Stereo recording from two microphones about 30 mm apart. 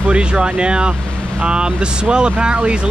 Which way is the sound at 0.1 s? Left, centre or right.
Right.